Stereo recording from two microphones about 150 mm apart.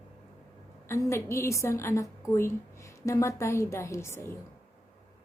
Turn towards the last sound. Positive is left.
turn(degrees=15)  # may be behind; listen again after turning